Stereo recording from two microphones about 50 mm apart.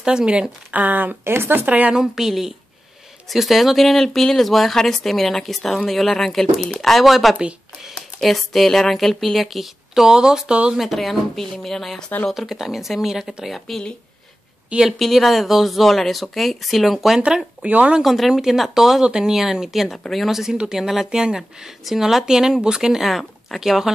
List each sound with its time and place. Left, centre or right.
0.0 s speech: centre
0.7 s speech: right
1.2 s speech: right
1.7 s a woman's voice: right
2.0 s speech: centre
10.8 s speech: centre
12.4 s speech: centre
14.9 s speech: centre
17.6 s speech: right
18.0 s speech: centre